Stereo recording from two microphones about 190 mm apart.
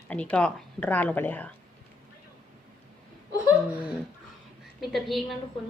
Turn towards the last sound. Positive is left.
turn(degrees=0)  # may be behind; listen again after turning